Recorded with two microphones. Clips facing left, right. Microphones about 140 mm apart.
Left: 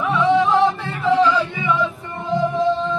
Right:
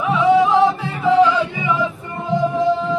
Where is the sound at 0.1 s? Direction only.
15° right (ahead or behind).